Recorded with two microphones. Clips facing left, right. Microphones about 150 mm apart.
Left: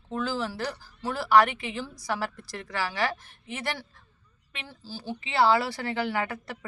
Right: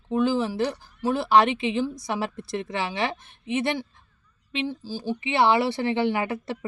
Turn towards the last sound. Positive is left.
turn(degrees=-20)  # may be behind; listen again after turning